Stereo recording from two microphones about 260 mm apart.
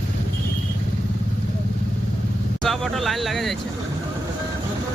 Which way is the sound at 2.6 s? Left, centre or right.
Centre.